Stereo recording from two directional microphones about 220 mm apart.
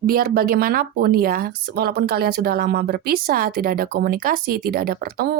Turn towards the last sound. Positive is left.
turn(degrees=-45)  # may be behind; listen again after turning